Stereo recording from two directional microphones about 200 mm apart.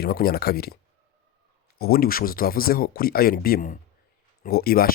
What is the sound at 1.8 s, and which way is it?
Speech, 50° left (ahead or behind).